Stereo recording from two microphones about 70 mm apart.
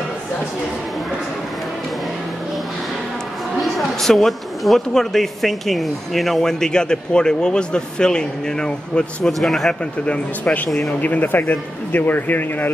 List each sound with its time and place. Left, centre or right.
3.6 s a woman's voice: centre
10.0 s a man's voice: centre